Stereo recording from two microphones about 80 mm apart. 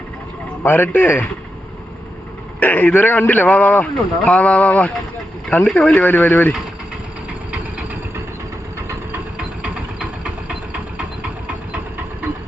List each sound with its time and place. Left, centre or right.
0.6 s a man's voice: left
2.6 s a man's voice: left